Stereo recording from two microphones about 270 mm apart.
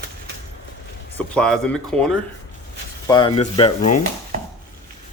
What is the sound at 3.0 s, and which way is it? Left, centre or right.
Speech, centre.